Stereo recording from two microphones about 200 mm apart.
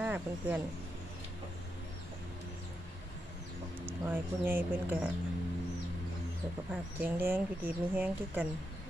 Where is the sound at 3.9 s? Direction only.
10° right (ahead or behind).